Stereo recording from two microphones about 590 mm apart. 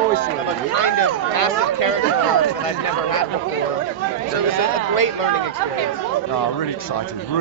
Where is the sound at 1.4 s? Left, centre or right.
Left.